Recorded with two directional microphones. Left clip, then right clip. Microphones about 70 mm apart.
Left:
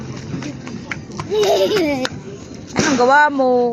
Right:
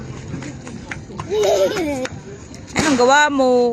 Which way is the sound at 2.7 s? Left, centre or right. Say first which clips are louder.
Left 1 dB; right.